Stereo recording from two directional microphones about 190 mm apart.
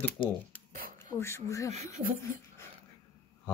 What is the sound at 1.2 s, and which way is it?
Speech, 15° left (ahead or behind).